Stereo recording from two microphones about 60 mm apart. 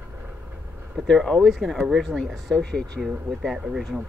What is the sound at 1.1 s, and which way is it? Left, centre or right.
Speech, centre.